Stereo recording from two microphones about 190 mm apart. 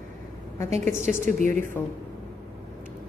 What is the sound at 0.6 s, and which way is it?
Speech, 15° left (ahead or behind).